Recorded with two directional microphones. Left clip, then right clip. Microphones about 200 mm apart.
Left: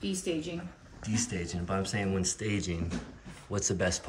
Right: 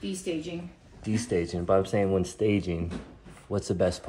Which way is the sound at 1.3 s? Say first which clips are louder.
Right 10 dB; 15° right (ahead or behind).